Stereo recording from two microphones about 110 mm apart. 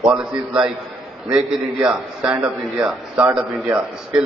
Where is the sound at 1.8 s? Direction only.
10° right (ahead or behind).